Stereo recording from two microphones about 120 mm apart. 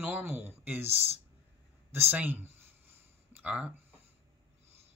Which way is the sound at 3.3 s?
10° right (ahead or behind).